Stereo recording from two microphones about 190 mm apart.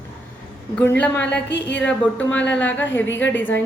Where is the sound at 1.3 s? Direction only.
65° left (ahead or behind).